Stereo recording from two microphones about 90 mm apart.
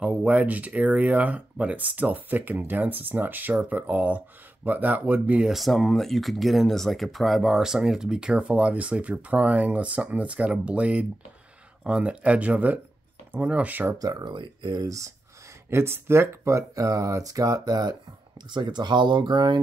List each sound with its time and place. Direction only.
0.0 s speech: 15° right (ahead or behind)
5.4 s speech: centre (ahead or behind); by 13.9 s 20° right (ahead or behind)
13.9 s speech: 45° right (ahead or behind)
14.8 s speech: 35° right (ahead or behind)
18.5 s speech: 55° right (ahead or behind)